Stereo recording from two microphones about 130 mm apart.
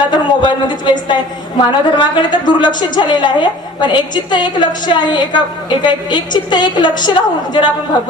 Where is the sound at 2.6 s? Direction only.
35° left (ahead or behind).